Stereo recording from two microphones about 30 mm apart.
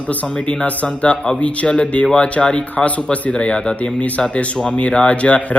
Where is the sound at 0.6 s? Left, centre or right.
Left.